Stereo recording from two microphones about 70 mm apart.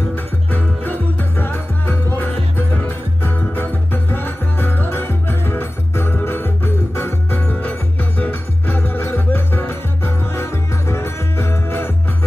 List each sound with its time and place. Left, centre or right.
0.1 s music: left